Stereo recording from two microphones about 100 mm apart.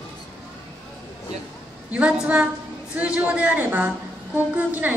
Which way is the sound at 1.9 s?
15° right (ahead or behind).